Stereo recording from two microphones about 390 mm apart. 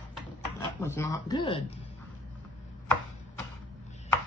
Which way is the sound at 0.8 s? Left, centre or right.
Centre.